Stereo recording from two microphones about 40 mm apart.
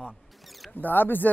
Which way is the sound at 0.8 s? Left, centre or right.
Left.